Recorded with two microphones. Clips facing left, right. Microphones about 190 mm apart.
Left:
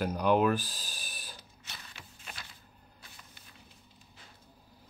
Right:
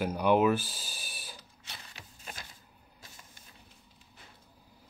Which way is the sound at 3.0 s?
45° right (ahead or behind).